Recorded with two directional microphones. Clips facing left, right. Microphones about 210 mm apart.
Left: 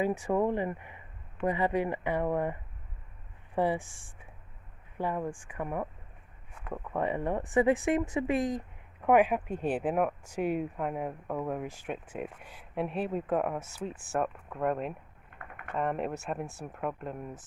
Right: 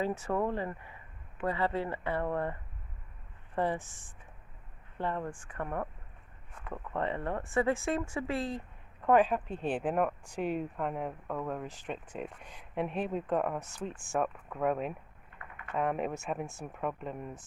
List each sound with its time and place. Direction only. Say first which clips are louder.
0.0 s speech: left 3 dB; 15° left (ahead or behind)